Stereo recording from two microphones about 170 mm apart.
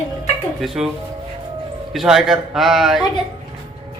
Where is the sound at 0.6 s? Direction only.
Centre (ahead or behind).